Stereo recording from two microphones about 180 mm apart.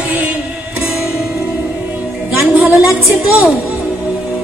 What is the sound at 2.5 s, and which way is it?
A woman's voice, 5° right (ahead or behind).